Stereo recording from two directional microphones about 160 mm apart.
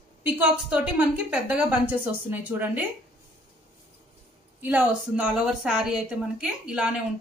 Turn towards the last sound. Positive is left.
turn(degrees=-5)  # may be behind; listen again after turning